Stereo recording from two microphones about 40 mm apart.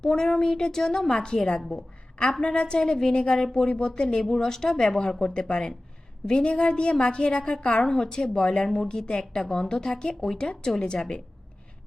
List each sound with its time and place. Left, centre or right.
0.0 s a woman's voice: centre